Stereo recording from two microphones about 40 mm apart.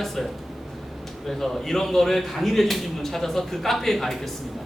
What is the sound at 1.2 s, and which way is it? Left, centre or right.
A man's voice, centre.